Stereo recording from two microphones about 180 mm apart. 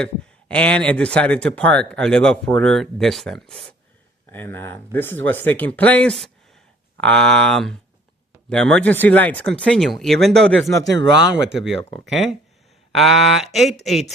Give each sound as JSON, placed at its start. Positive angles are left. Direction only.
{"t": 0.0, "sound": "speech", "side_deg": 5}
{"t": 10.8, "sound": "speech", "side_deg": -75}
{"t": 11.5, "sound": "speech", "side_deg": 0}